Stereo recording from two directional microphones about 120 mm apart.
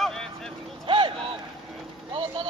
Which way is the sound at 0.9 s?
45° right (ahead or behind).